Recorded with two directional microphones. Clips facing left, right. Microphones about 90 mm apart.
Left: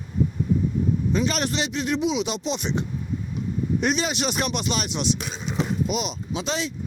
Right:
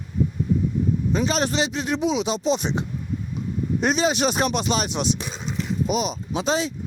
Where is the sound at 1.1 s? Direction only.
30° right (ahead or behind).